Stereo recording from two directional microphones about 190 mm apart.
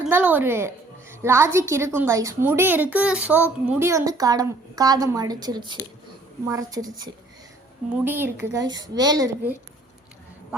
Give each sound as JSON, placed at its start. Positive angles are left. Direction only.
{"t": 0.1, "sound": "a woman's voice", "side_deg": -10}